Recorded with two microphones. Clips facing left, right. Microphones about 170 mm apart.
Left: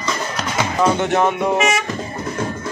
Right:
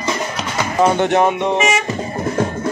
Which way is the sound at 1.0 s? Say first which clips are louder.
Right 3 dB; 20° right (ahead or behind).